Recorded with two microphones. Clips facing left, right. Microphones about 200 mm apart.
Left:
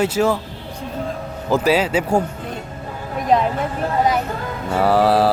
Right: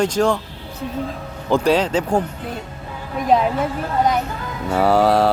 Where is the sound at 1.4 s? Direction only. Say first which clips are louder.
Even; 5° left (ahead or behind).